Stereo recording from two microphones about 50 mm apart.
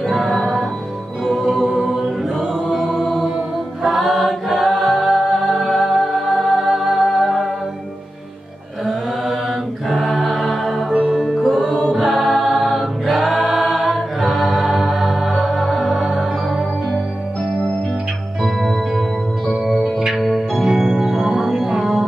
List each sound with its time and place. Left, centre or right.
0.0 s music: centre
1.5 s a capella: centre
1.8 s choir: centre
3.8 s a capella: centre
7.0 s music: centre
9.8 s chant: centre
10.9 s music: centre
11.4 s music: centre
11.9 s choir: centre
14.2 s music: centre
18.4 s music: centre